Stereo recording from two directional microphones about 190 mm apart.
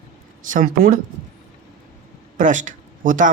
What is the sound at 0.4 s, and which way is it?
Speech, 45° right (ahead or behind).